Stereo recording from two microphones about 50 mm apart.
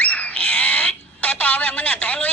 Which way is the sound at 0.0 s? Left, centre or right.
Left.